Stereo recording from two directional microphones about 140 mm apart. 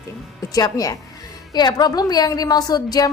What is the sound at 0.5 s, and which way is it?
A woman's voice, 25° left (ahead or behind).